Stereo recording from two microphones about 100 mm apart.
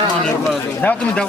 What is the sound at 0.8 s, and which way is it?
Speech, 10° left (ahead or behind).